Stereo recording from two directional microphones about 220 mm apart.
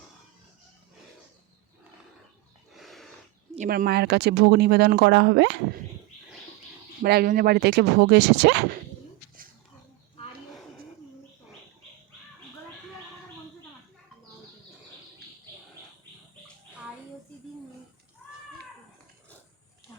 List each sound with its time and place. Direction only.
2.7 s horse: centre (ahead or behind)
3.5 s speech: 35° right (ahead or behind)
7.0 s speech: 45° right (ahead or behind)